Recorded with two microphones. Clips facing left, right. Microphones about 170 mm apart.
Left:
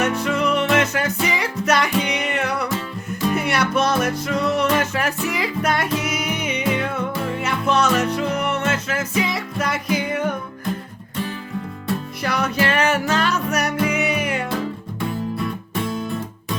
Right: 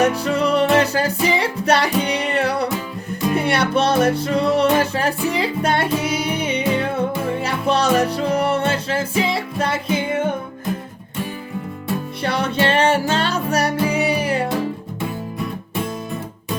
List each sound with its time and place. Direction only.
0.0 s music: 35° right (ahead or behind)
12.2 s music: 30° right (ahead or behind)